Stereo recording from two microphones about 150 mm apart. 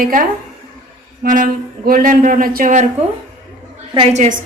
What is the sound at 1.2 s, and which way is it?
Speech, 70° right (ahead or behind).